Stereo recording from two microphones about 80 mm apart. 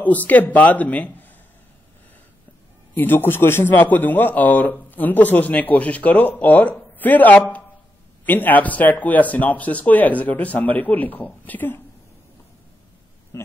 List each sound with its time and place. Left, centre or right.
0.3 s a man's voice: left
2.9 s a man's voice: left
13.3 s speech: left